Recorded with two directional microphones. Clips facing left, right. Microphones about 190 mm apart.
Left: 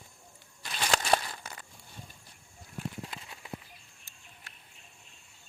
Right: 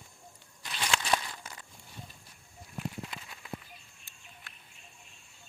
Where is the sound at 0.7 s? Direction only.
40° left (ahead or behind).